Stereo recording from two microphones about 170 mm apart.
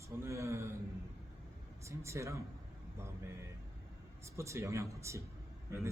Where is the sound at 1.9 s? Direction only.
15° right (ahead or behind).